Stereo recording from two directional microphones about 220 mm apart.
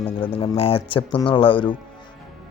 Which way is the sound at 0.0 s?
25° left (ahead or behind).